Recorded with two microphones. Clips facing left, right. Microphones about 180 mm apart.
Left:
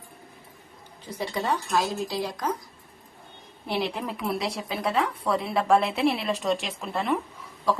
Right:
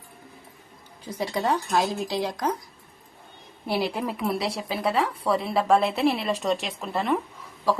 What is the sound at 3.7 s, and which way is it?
A woman's voice, 5° right (ahead or behind).